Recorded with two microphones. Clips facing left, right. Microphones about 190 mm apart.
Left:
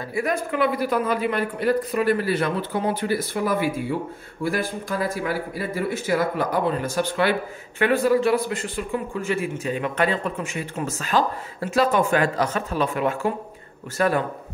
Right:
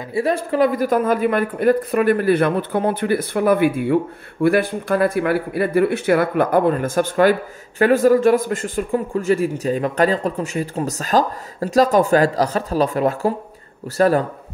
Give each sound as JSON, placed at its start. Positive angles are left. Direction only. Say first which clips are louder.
{"t": 0.1, "sound": "a man's voice", "louder": "right 5 dB", "side_deg": -30}